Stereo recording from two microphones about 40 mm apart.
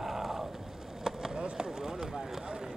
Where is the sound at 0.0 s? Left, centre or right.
Centre.